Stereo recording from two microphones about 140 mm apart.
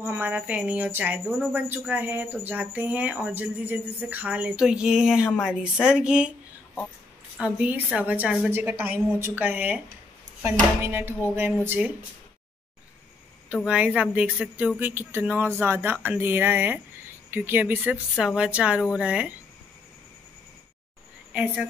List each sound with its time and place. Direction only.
0.0 s speech: 15° right (ahead or behind)
7.3 s speech: 10° right (ahead or behind)
10.8 s speech: 15° right (ahead or behind)
13.7 s speech: 10° right (ahead or behind)